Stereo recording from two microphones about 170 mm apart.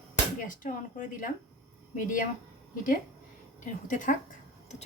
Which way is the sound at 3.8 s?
50° left (ahead or behind).